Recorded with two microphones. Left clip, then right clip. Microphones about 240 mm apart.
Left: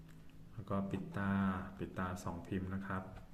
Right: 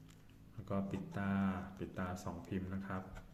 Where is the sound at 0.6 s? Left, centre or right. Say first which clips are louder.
Left 1 dB; centre.